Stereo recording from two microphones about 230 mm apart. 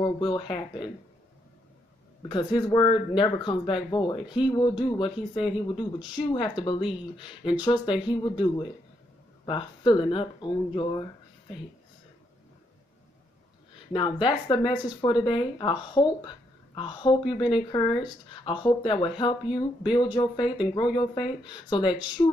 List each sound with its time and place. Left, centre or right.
0.0 s speech: centre
2.2 s speech: centre
7.6 s speech: centre
14.2 s speech: left